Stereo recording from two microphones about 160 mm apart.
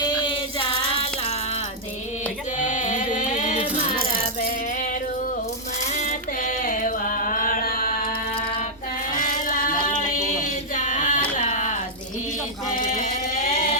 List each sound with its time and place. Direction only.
0.0 s child singing: 30° left (ahead or behind)
2.6 s music: 50° left (ahead or behind)
4.4 s rattle: 60° left (ahead or behind)
6.1 s carnatic music: 55° left (ahead or behind)
9.1 s a sound: 55° left (ahead or behind)
12.7 s a sound: 60° left (ahead or behind)